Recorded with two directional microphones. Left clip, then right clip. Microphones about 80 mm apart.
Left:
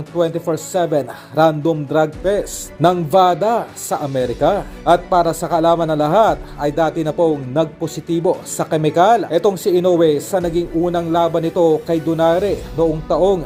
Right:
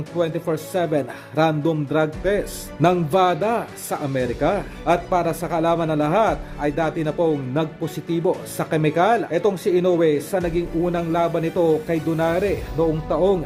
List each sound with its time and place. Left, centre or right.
0.1 s speech: left
3.9 s speech: centre
4.4 s speech: left
10.3 s speech: left